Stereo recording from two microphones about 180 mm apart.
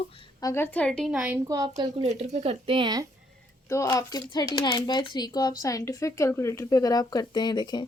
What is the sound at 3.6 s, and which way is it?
Speech, 20° left (ahead or behind).